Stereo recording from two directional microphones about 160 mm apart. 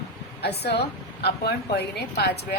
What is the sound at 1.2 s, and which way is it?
Speech, 90° left.